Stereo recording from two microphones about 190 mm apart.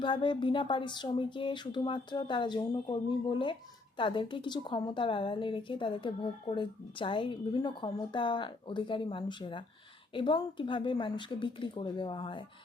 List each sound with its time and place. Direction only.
0.0 s speech: 25° left (ahead or behind)